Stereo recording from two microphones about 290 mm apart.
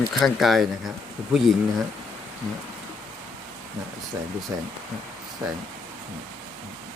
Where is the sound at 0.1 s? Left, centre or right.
Centre.